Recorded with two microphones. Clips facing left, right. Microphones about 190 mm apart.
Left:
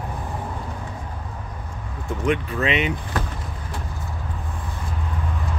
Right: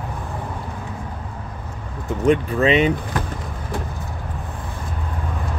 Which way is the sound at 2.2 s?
35° right (ahead or behind).